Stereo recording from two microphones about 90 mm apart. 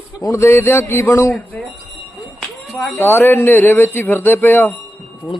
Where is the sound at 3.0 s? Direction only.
25° left (ahead or behind).